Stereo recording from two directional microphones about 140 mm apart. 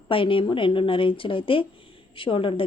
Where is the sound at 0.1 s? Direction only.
40° left (ahead or behind).